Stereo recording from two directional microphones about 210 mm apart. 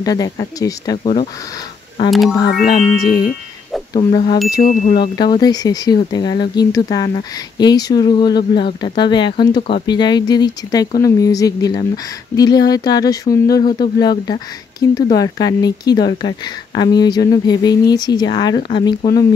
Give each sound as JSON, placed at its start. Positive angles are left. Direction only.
{"t": 0.0, "sound": "speech", "side_deg": 15}
{"t": 2.0, "sound": "speech", "side_deg": 0}
{"t": 2.7, "sound": "speech", "side_deg": 20}